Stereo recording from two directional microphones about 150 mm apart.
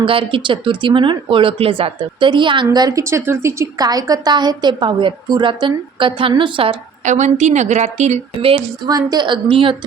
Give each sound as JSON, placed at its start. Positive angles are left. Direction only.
{"t": 0.0, "sound": "speech", "side_deg": -35}
{"t": 7.0, "sound": "a woman's voice", "side_deg": -55}
{"t": 8.9, "sound": "speech", "side_deg": -25}